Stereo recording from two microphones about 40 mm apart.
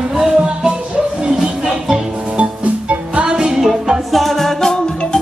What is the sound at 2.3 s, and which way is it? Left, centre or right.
Music, right.